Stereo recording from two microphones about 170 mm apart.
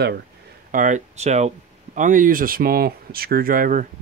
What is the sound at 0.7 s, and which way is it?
Speech, 45° right (ahead or behind).